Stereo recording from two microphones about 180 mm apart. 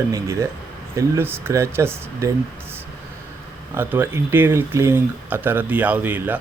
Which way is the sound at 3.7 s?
10° right (ahead or behind).